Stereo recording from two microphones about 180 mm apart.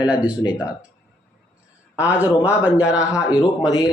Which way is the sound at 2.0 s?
10° right (ahead or behind).